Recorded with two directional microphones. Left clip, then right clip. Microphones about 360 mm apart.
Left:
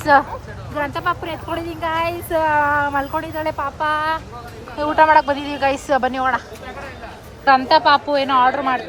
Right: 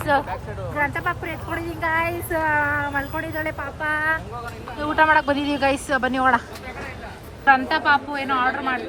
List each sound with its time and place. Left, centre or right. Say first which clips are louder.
0.1 s speech: left 8 dB; centre
7.4 s speech: left 4 dB; centre